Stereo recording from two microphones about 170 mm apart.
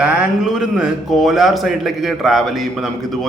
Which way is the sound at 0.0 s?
5° right (ahead or behind).